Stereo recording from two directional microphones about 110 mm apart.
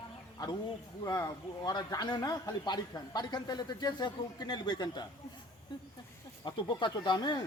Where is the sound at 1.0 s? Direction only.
35° left (ahead or behind).